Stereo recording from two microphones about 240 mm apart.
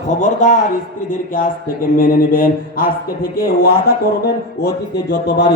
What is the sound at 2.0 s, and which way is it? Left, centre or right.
Mantra, left.